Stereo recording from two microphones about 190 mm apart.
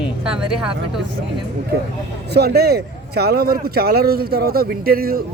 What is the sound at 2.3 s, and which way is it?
A man's voice, 55° right (ahead or behind).